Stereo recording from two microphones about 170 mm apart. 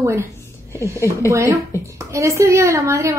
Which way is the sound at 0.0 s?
15° right (ahead or behind).